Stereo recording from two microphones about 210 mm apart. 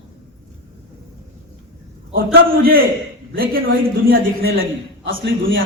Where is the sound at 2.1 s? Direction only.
45° right (ahead or behind).